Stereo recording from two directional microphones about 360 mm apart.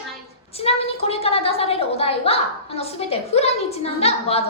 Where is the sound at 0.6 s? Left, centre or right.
Centre.